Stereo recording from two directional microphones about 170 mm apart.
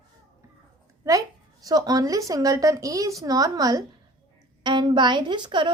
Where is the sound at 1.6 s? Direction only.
20° right (ahead or behind).